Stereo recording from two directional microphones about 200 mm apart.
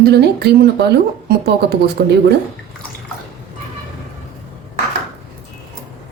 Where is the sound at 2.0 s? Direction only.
55° right (ahead or behind).